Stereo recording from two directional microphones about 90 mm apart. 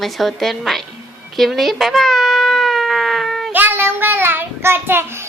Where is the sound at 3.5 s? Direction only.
25° right (ahead or behind).